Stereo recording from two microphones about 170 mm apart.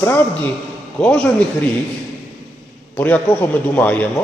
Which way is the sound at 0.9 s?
5° left (ahead or behind).